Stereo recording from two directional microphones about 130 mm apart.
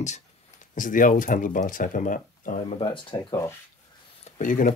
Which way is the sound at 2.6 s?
45° left (ahead or behind).